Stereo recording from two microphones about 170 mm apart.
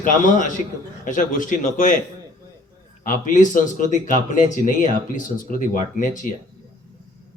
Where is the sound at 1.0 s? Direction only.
50° left (ahead or behind).